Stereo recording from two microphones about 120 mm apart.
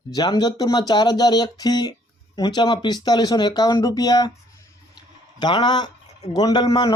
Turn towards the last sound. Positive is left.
turn(degrees=40)  # may be behind; listen again after turning